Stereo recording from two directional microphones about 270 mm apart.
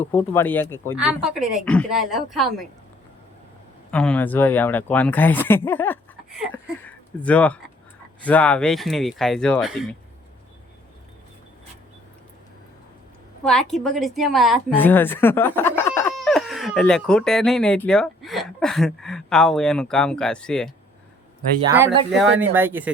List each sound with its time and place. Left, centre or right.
0.0 s speech: centre
0.9 s a woman's voice: centre
3.9 s a woman's voice: centre
13.4 s a woman's voice: centre
22.2 s speech: centre